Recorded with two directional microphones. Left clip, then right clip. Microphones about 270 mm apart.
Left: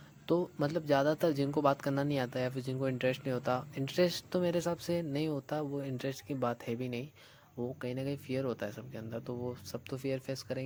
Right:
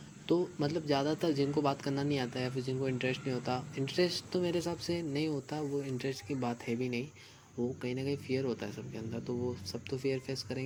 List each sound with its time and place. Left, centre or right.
0.3 s speech: left